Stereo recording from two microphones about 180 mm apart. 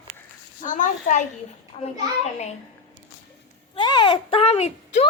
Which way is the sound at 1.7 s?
30° left (ahead or behind).